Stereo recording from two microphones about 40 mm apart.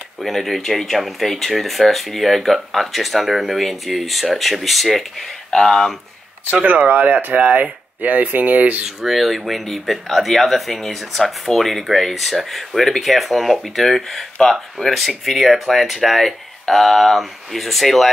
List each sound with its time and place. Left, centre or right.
0.2 s speech: centre
6.6 s speech: right
9.0 s speech: centre